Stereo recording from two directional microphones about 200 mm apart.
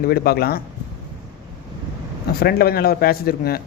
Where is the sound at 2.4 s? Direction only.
50° left (ahead or behind).